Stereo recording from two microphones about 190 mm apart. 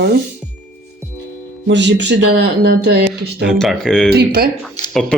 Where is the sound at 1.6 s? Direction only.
70° right (ahead or behind).